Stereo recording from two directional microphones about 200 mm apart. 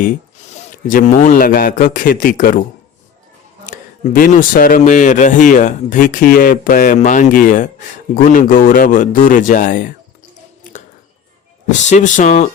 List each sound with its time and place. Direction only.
0.5 s a man's voice: 40° left (ahead or behind)
3.7 s a man's voice: 45° left (ahead or behind)
10.6 s a sound: 40° left (ahead or behind)
11.9 s a man's voice: 35° left (ahead or behind)